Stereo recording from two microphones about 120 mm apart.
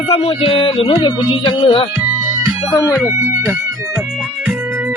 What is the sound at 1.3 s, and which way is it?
Speech, 50° left (ahead or behind).